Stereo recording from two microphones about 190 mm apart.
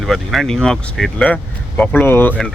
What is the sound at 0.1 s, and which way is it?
Speech, centre (ahead or behind).